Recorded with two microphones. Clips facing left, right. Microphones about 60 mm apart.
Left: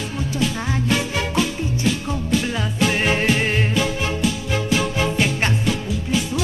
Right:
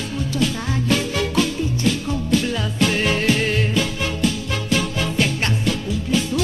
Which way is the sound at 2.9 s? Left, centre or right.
Left.